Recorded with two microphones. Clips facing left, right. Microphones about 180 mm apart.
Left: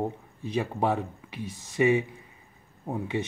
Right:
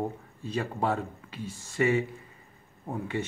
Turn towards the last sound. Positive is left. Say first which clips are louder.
# left 2 dB
turn(degrees=15)  # may be behind; listen again after turning